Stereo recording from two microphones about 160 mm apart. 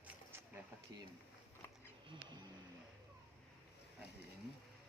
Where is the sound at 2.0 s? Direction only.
30° right (ahead or behind).